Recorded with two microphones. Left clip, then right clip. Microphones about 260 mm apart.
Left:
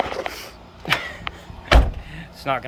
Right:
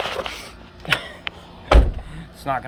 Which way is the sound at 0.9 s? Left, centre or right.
Centre.